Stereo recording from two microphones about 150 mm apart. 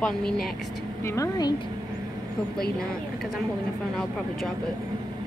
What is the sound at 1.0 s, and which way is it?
Speech, 25° left (ahead or behind).